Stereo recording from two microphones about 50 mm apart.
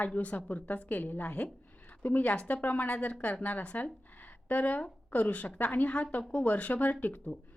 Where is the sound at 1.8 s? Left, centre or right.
Left.